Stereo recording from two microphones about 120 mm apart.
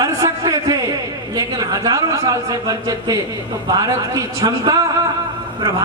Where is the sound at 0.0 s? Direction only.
30° right (ahead or behind).